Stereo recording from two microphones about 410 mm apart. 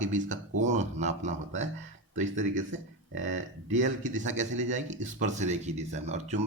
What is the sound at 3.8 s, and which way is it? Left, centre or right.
Speech, centre.